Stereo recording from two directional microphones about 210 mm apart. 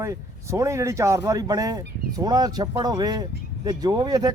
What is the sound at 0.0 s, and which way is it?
Speech, 15° right (ahead or behind).